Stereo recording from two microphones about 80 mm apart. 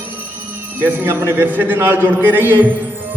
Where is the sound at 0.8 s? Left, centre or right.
Right.